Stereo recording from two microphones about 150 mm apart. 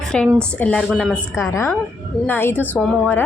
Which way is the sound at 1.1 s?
20° left (ahead or behind).